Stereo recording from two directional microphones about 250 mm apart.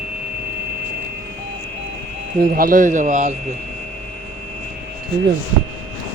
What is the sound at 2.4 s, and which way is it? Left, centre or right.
Speech, right.